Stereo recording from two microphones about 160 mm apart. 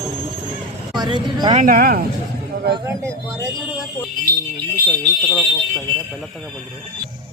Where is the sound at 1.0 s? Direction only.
30° right (ahead or behind).